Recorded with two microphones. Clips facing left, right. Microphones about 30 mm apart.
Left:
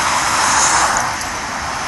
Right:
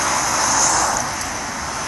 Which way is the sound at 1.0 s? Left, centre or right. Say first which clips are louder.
Left 4 dB; left.